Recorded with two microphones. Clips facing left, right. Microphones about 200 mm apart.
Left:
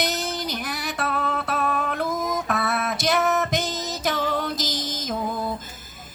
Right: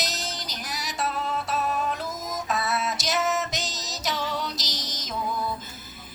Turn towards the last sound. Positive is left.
turn(degrees=50)  # may be behind; listen again after turning